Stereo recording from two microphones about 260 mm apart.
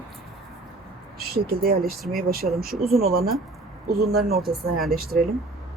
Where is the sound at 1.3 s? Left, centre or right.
Right.